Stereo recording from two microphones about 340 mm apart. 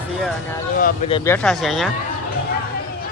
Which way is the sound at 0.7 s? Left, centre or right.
Left.